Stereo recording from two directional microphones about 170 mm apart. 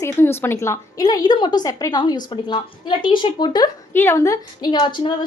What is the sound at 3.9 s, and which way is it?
A woman's voice, 15° left (ahead or behind).